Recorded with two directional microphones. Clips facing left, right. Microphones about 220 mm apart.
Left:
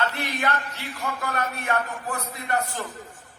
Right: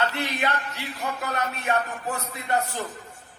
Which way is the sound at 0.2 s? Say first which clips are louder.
Even; 20° right (ahead or behind).